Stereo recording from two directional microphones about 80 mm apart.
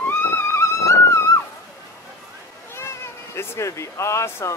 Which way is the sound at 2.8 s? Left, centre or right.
Left.